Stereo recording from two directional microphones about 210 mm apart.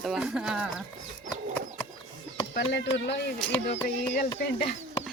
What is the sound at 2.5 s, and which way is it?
Speech, 55° left (ahead or behind).